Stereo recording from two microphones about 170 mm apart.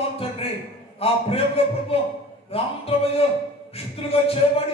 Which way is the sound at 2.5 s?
35° left (ahead or behind).